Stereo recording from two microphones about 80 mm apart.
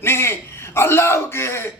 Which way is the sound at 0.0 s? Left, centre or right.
Left.